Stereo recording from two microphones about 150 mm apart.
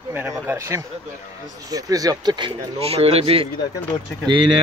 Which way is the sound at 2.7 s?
40° right (ahead or behind).